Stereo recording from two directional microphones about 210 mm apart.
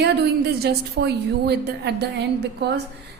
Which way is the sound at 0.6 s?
50° right (ahead or behind).